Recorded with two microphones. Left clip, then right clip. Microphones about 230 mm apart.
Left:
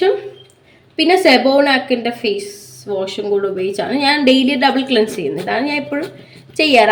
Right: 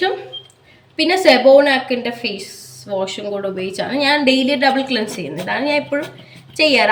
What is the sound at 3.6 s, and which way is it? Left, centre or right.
A woman's voice, centre.